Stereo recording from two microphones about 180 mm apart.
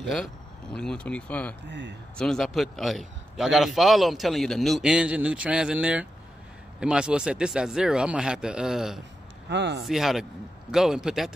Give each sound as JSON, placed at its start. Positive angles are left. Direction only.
{"t": 0.0, "sound": "speech", "side_deg": 5}
{"t": 1.7, "sound": "speech", "side_deg": -85}
{"t": 2.1, "sound": "a man's voice", "side_deg": 5}
{"t": 9.5, "sound": "speech", "side_deg": -75}
{"t": 9.8, "sound": "a man's voice", "side_deg": 0}